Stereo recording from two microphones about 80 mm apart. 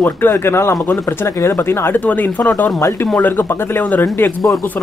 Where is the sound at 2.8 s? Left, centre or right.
Left.